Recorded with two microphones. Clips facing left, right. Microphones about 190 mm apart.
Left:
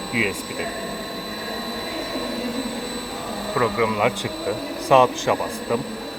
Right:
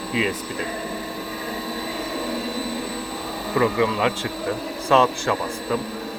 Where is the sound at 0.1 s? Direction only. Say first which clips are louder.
Right 1 dB; 10° left (ahead or behind).